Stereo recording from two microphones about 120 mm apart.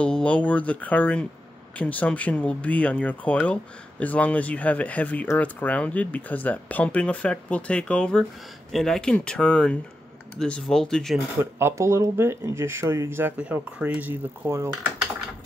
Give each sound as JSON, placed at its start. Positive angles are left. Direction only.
{"t": 0.0, "sound": "speech", "side_deg": 10}
{"t": 11.3, "sound": "speech", "side_deg": -20}
{"t": 13.4, "sound": "speech", "side_deg": -10}